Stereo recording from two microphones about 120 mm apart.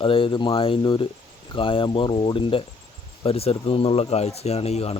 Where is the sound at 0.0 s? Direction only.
50° left (ahead or behind).